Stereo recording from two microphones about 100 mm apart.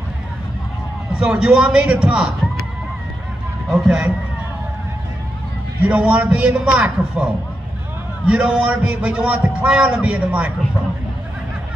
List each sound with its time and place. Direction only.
1.1 s a man's voice: 5° right (ahead or behind)
3.7 s speech: 5° right (ahead or behind)
5.8 s a man's voice: 10° right (ahead or behind)
8.3 s a man's voice: 10° right (ahead or behind)